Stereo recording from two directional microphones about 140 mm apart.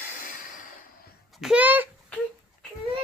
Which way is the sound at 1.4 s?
5° right (ahead or behind).